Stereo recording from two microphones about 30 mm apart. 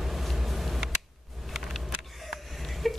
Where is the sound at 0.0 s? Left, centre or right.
Centre.